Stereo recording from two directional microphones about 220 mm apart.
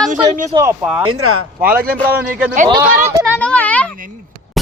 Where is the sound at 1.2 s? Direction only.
75° right (ahead or behind).